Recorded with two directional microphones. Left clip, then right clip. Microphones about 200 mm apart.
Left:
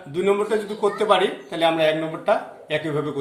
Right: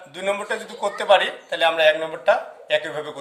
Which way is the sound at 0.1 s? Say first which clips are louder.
Left 4 dB; 55° right (ahead or behind).